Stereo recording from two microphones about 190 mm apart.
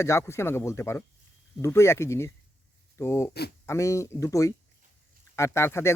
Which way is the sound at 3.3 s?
60° left (ahead or behind).